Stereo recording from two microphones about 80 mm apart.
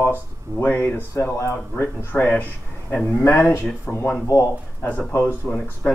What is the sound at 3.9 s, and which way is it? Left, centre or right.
Speech, centre.